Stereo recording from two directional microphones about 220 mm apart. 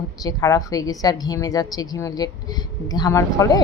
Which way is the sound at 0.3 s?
15° left (ahead or behind).